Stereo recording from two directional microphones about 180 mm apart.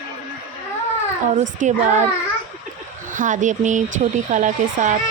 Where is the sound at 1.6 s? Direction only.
40° right (ahead or behind).